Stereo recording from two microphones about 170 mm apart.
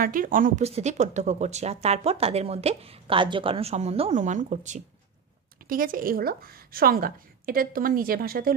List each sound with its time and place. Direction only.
0.0 s speech: 55° right (ahead or behind)
0.7 s a woman's voice: 40° right (ahead or behind)
5.7 s a woman's voice: 55° right (ahead or behind)